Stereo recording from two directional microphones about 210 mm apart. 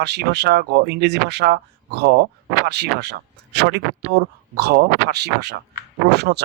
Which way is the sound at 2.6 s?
50° right (ahead or behind).